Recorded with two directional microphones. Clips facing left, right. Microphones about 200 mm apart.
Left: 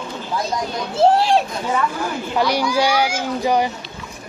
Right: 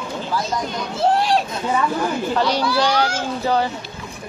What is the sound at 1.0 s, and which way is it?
Speech, 30° left (ahead or behind).